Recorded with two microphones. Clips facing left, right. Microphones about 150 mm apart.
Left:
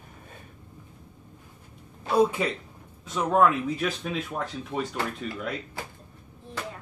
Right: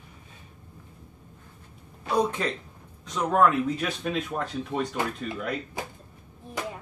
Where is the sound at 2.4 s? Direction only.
10° left (ahead or behind).